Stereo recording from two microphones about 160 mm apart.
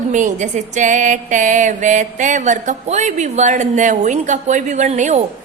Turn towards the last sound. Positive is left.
turn(degrees=-45)  # may be behind; listen again after turning